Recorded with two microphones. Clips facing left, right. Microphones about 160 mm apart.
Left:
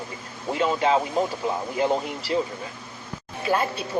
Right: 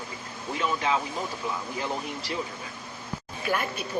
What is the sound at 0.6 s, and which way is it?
Speech, 30° left (ahead or behind).